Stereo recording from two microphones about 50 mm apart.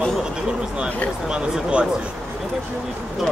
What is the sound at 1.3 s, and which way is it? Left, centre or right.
Speech, right.